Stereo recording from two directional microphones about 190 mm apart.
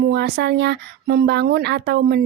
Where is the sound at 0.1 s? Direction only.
60° right (ahead or behind).